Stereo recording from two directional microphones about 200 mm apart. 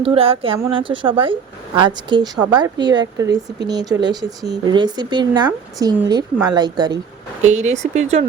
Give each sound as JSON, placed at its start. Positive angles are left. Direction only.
{"t": 0.0, "sound": "a woman's voice", "side_deg": -30}
{"t": 7.4, "sound": "speech", "side_deg": -35}